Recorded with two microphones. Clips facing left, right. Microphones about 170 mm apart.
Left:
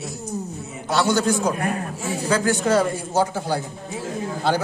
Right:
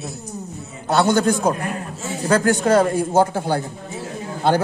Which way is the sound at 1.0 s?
55° right (ahead or behind).